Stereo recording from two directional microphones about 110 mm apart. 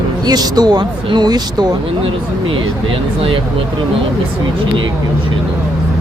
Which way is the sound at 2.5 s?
50° right (ahead or behind).